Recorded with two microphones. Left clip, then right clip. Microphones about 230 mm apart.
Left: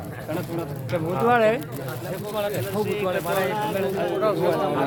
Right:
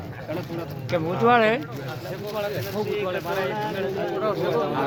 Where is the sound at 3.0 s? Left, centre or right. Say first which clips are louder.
Left 2 dB; left.